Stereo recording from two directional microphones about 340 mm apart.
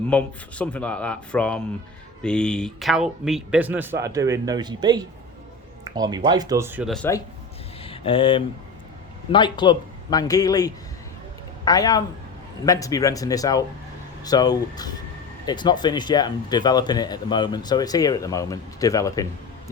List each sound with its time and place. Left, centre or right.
0.1 s speech: centre
7.8 s a man's voice: centre